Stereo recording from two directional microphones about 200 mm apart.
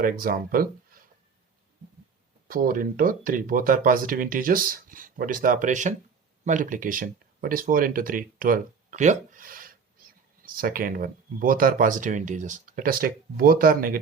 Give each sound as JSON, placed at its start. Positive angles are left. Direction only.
{"t": 0.0, "sound": "speech", "side_deg": -45}
{"t": 2.5, "sound": "speech", "side_deg": -45}